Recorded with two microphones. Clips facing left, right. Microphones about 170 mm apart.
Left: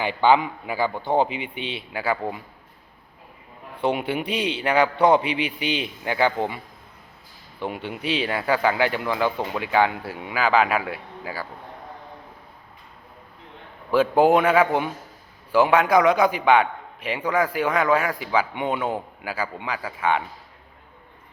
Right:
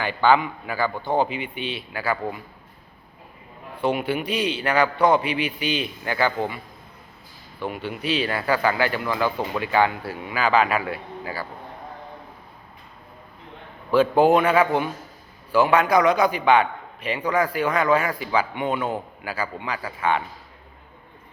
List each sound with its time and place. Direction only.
0.0 s a man's voice: 20° left (ahead or behind)
3.8 s a man's voice: 25° left (ahead or behind)
7.6 s a man's voice: 20° left (ahead or behind)
10.3 s speech: 10° left (ahead or behind)
13.9 s speech: 10° left (ahead or behind)